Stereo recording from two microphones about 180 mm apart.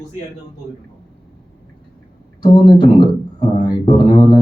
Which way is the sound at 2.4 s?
25° left (ahead or behind).